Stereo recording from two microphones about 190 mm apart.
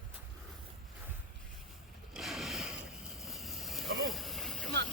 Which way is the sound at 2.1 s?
Centre (ahead or behind).